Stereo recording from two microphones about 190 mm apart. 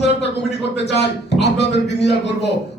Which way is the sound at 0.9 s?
65° left (ahead or behind).